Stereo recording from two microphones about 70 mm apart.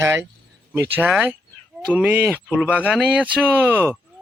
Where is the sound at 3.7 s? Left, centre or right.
Right.